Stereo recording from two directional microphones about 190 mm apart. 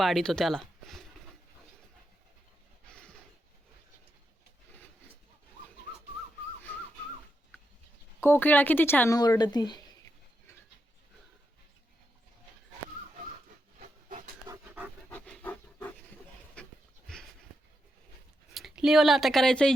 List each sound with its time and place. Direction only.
0.0 s speech: centre (ahead or behind)
8.2 s speech: 10° left (ahead or behind)
13.7 s a sound: 45° right (ahead or behind)
14.4 s pant: 15° right (ahead or behind)
15.1 s pant: 5° left (ahead or behind)
16.6 s dog: 5° left (ahead or behind)
17.1 s a sound: 5° left (ahead or behind)
18.5 s speech: centre (ahead or behind)